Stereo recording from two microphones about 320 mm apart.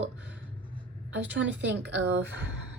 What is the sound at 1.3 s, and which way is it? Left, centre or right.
A woman's voice, right.